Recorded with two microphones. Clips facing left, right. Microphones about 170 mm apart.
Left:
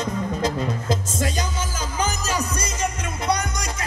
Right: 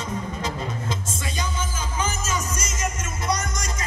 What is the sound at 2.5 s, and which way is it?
Music, 65° left (ahead or behind).